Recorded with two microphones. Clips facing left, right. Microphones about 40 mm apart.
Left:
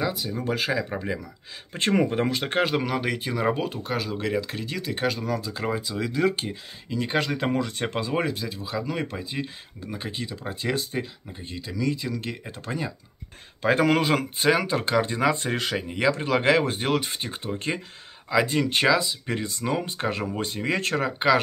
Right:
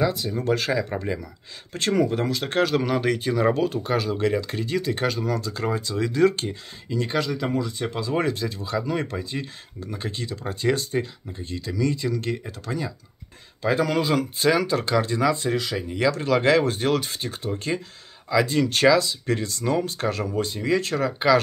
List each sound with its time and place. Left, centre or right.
0.0 s speech: centre
1.7 s speech: left
2.8 s speech: centre
7.2 s speech: left
8.1 s speech: centre
12.4 s speech: left
13.6 s speech: left
14.4 s speech: left
15.3 s speech: left
15.9 s speech: left